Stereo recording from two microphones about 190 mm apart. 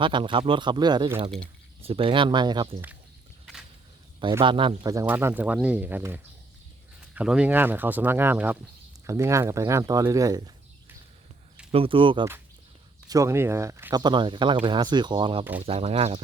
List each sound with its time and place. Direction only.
0.0 s speech: 25° right (ahead or behind)
4.2 s speech: 25° right (ahead or behind)
11.7 s speech: 30° right (ahead or behind)
13.1 s speech: 15° right (ahead or behind); by 16.2 s 30° right (ahead or behind)